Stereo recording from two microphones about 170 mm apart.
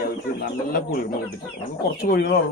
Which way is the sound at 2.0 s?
65° left (ahead or behind).